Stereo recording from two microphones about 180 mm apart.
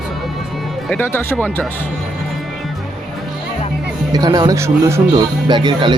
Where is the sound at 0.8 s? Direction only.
10° left (ahead or behind).